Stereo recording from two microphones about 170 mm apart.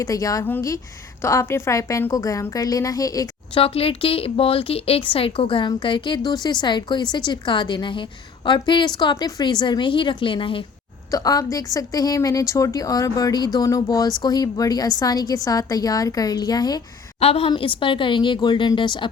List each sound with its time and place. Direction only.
0.0 s a woman's voice: 20° left (ahead or behind)
3.6 s a woman's voice: 35° left (ahead or behind)
17.2 s a woman's voice: 35° left (ahead or behind)